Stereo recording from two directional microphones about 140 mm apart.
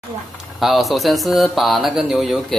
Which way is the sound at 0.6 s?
Centre (ahead or behind).